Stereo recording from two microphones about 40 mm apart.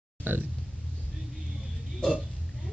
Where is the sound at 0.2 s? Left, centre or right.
Right.